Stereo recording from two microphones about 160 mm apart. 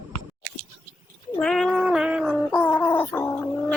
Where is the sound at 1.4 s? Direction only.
5° left (ahead or behind).